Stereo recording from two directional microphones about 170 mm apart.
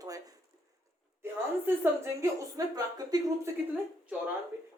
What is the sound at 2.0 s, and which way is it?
A woman's voice, 20° right (ahead or behind).